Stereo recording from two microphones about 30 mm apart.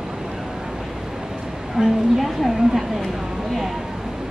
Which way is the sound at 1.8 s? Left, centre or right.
Centre.